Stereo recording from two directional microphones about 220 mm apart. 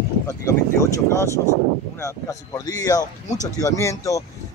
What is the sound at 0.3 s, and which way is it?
Speech, 15° left (ahead or behind).